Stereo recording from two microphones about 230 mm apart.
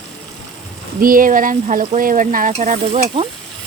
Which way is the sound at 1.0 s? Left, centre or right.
Right.